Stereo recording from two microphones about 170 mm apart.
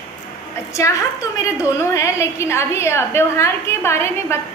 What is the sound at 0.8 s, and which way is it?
A woman's voice, 20° left (ahead or behind).